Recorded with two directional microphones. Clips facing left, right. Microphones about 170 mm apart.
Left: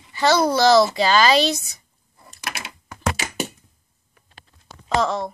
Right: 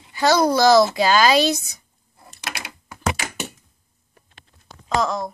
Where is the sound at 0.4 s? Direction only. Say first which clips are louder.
Right 1 dB; 15° right (ahead or behind).